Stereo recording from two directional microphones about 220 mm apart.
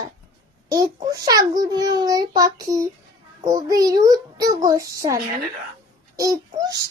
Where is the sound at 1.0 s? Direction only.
15° right (ahead or behind).